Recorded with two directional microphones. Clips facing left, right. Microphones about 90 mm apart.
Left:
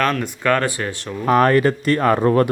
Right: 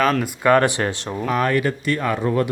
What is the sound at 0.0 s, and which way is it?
Speech, 5° right (ahead or behind).